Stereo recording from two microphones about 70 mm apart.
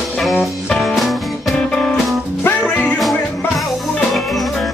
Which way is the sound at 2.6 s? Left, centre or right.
Centre.